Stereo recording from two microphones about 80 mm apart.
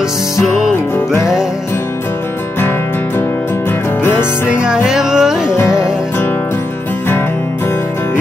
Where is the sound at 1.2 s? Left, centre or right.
Centre.